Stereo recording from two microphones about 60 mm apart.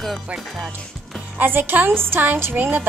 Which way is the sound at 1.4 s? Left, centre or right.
Right.